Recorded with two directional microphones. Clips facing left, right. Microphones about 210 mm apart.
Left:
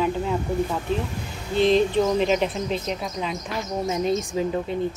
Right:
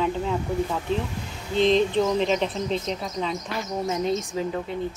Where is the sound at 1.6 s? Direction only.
5° left (ahead or behind).